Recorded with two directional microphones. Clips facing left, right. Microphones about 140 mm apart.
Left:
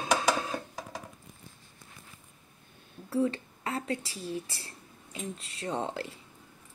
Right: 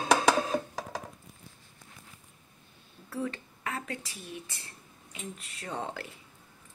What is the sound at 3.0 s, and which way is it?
Speech, 30° left (ahead or behind).